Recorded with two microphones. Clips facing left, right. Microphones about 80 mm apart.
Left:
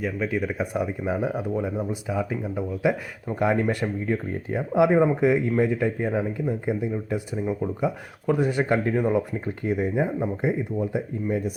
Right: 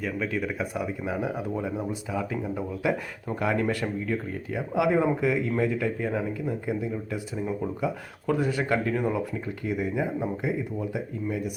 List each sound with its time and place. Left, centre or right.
0.0 s speech: centre
2.0 s speech: centre
3.4 s speech: left